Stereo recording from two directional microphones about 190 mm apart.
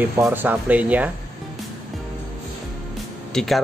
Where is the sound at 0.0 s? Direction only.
10° right (ahead or behind).